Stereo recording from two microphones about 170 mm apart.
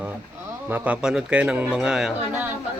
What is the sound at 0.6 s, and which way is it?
Speech, 10° right (ahead or behind).